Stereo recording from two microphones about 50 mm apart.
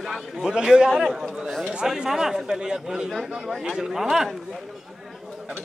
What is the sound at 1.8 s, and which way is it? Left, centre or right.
Speech, centre.